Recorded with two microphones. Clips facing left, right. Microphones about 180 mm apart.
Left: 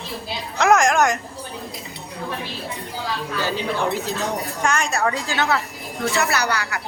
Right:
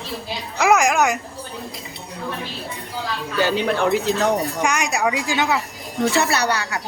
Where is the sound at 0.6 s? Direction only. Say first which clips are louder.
Even; 5° right (ahead or behind).